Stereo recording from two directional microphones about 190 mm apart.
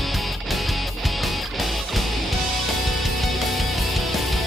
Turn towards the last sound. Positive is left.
turn(degrees=0)  # may be behind; listen again after turning